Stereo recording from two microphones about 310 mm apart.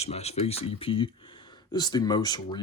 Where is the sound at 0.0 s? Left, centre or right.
Centre.